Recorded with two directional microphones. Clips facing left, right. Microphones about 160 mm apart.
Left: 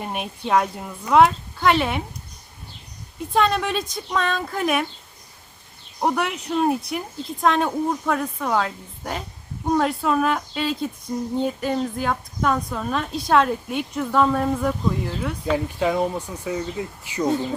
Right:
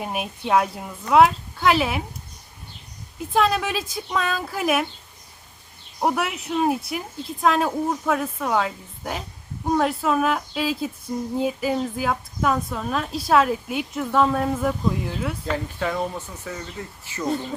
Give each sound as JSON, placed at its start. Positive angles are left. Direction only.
{"t": 0.0, "sound": "a woman's voice", "side_deg": -5}
{"t": 3.2, "sound": "a woman's voice", "side_deg": 0}
{"t": 6.0, "sound": "a woman's voice", "side_deg": -5}
{"t": 15.4, "sound": "speech", "side_deg": 15}